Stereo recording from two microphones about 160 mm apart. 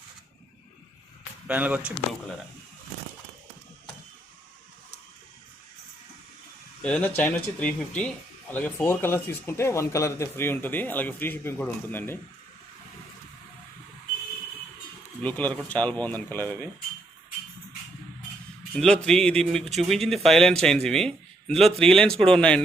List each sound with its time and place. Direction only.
1.5 s speech: 10° right (ahead or behind)
6.8 s speech: 10° left (ahead or behind)
15.2 s speech: 10° left (ahead or behind)
18.7 s speech: 5° left (ahead or behind)